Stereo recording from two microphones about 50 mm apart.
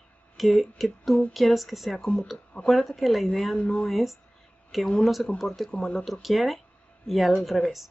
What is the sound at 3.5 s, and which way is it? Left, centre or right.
Speech, left.